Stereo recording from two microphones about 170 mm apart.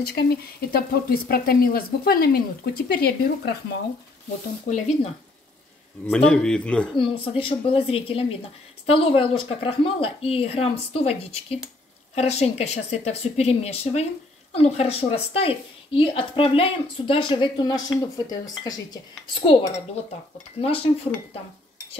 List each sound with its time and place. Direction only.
0.0 s speech: 65° left (ahead or behind)
4.6 s speech: 45° left (ahead or behind)
6.0 s speech: 5° left (ahead or behind)
7.0 s speech: 30° left (ahead or behind)
20.6 s speech: 35° left (ahead or behind)